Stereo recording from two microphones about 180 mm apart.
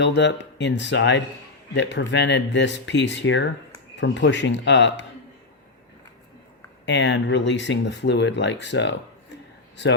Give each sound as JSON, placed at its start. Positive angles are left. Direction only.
{"t": 0.0, "sound": "speech", "side_deg": 70}
{"t": 6.8, "sound": "speech", "side_deg": 80}